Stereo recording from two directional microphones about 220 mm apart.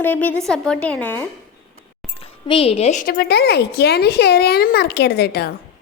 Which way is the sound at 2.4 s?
25° left (ahead or behind).